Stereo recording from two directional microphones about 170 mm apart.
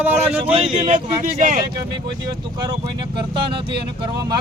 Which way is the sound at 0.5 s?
30° right (ahead or behind).